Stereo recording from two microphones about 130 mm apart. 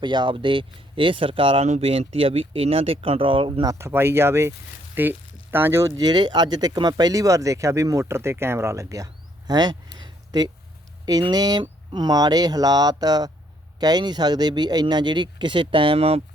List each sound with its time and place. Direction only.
0.0 s speech: 35° right (ahead or behind)
3.7 s speech: 20° right (ahead or behind)
6.0 s speech: 35° right (ahead or behind)
9.5 s a sound: 30° right (ahead or behind)
11.0 s speech: 30° right (ahead or behind); by 16.2 s 50° right (ahead or behind)